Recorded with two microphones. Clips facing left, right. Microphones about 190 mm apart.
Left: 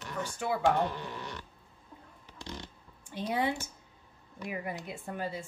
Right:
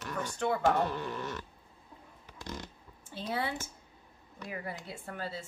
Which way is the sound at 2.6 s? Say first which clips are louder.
Right 1 dB; 20° left (ahead or behind).